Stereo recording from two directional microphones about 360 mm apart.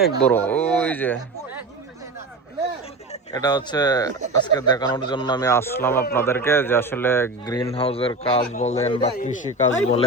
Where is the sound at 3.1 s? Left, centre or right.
Centre.